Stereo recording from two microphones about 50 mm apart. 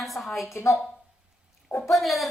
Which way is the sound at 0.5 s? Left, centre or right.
Left.